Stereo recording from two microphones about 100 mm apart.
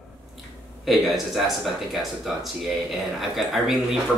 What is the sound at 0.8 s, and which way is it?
Speech, centre (ahead or behind).